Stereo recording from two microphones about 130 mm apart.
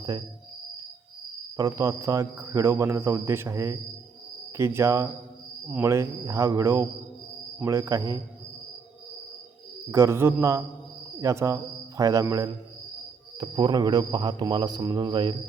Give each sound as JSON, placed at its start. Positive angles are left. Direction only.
{"t": 1.5, "sound": "speech", "side_deg": -25}
{"t": 9.9, "sound": "a man's voice", "side_deg": -20}